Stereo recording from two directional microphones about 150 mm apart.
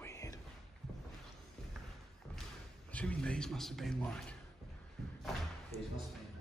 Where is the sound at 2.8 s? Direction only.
10° left (ahead or behind).